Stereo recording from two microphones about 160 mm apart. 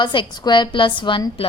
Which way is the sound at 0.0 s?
30° left (ahead or behind).